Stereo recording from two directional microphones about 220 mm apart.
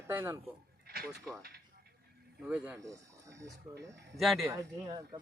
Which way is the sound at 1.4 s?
45° right (ahead or behind).